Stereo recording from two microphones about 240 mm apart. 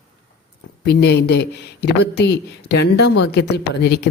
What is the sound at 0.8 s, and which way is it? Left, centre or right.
Speech, left.